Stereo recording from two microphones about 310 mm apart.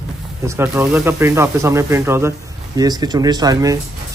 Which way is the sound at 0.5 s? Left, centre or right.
Centre.